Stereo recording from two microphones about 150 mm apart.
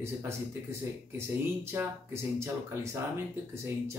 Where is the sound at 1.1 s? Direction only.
15° right (ahead or behind).